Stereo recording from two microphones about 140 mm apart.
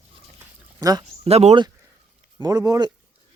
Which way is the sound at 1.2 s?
45° right (ahead or behind).